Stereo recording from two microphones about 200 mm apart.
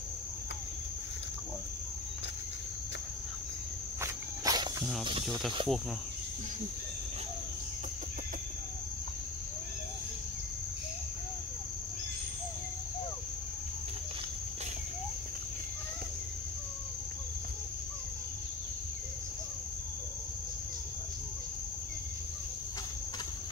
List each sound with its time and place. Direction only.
4.0 s walk: 15° right (ahead or behind)
5.6 s insect: 25° right (ahead or behind)